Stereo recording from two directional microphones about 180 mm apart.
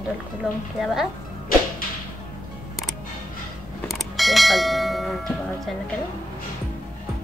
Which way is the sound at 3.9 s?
Centre (ahead or behind).